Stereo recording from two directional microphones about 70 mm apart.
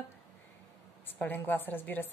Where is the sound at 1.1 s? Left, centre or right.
Left.